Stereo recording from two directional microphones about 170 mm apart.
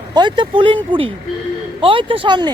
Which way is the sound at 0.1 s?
25° right (ahead or behind).